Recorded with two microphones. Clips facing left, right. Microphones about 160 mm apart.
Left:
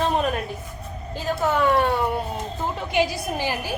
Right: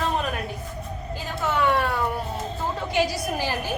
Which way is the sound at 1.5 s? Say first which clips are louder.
Left 2 dB; 40° left (ahead or behind).